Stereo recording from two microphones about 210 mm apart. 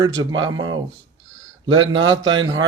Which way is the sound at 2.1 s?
20° right (ahead or behind).